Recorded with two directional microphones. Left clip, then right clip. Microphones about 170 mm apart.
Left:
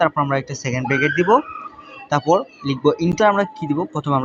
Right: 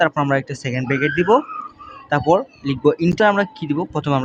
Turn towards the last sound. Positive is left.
turn(degrees=-25)  # may be behind; listen again after turning